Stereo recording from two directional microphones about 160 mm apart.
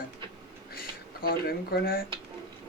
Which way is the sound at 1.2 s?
70° left (ahead or behind).